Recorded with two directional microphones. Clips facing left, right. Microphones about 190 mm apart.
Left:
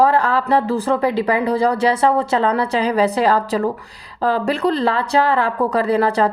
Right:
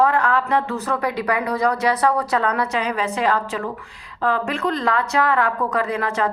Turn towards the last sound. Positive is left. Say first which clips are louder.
# left 6 dB
turn(degrees=35)  # may be behind; listen again after turning